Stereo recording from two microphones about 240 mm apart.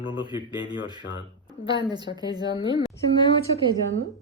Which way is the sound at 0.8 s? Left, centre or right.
Centre.